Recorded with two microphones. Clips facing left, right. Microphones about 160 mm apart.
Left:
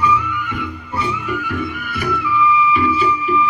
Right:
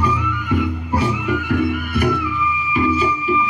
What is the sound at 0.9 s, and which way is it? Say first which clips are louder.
Music: right 3 dB; 70° right (ahead or behind).